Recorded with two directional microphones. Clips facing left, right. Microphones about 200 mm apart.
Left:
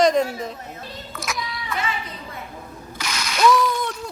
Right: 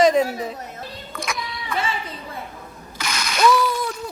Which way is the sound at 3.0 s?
50° right (ahead or behind).